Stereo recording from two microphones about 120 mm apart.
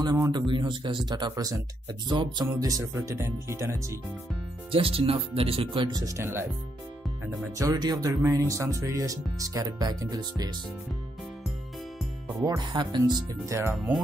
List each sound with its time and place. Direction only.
0.0 s speech: 35° right (ahead or behind)
2.8 s speech: 25° right (ahead or behind)
4.6 s speech: 50° right (ahead or behind); by 6.4 s 20° right (ahead or behind)
7.5 s speech: 30° right (ahead or behind)
12.4 s speech: 35° right (ahead or behind)
13.5 s speech: 20° right (ahead or behind)